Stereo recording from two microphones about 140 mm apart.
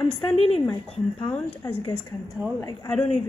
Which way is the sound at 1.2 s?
30° left (ahead or behind).